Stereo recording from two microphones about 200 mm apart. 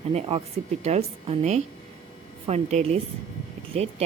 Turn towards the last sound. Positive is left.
turn(degrees=-30)  # may be behind; listen again after turning